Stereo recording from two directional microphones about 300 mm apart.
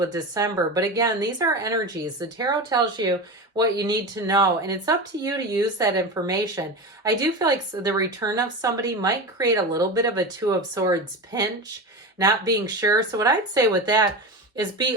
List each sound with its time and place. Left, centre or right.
0.0 s speech: centre
12.5 s speech: centre